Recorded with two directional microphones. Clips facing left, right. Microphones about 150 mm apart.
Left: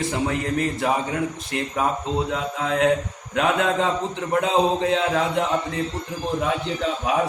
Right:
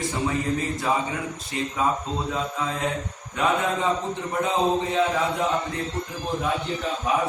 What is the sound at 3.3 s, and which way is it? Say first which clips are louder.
A man's voice: left 3 dB; 90° left.